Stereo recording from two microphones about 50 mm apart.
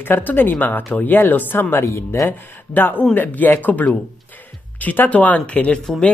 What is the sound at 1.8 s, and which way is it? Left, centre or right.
Speech, left.